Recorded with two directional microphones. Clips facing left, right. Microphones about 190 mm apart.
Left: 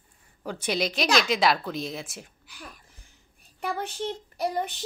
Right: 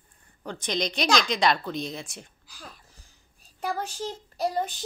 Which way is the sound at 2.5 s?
60° left (ahead or behind).